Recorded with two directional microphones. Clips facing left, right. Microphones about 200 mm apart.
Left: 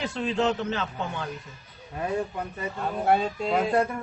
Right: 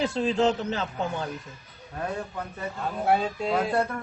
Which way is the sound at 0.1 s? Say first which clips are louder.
Right 2 dB; 35° right (ahead or behind).